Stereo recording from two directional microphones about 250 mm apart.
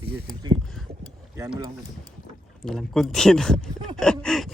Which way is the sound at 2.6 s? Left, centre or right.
Centre.